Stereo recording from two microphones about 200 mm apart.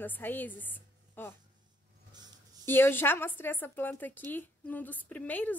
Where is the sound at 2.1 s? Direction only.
20° right (ahead or behind).